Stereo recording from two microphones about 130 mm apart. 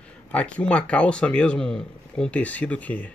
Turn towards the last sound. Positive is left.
turn(degrees=10)  # may be behind; listen again after turning